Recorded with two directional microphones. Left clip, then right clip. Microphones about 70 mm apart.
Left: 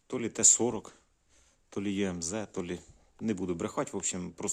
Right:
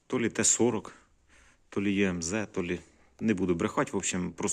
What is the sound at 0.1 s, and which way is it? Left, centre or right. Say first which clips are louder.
Speech: even; centre.